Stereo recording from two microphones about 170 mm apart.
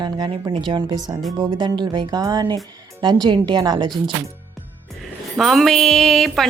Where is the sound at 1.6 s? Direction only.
25° right (ahead or behind).